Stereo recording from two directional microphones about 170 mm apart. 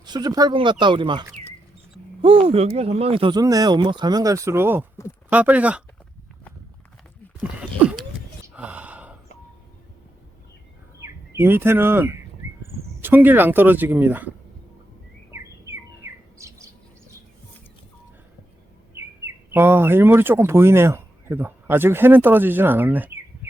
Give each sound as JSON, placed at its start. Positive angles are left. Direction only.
{"t": 0.0, "sound": "speech", "side_deg": -25}
{"t": 7.6, "sound": "a sound", "side_deg": -5}
{"t": 8.5, "sound": "gasp", "side_deg": -10}
{"t": 11.0, "sound": "speech", "side_deg": -15}
{"t": 15.3, "sound": "bird", "side_deg": -15}
{"t": 18.9, "sound": "speech", "side_deg": -15}